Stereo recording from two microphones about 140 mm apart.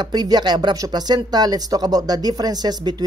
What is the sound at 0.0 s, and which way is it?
Speech, 30° right (ahead or behind).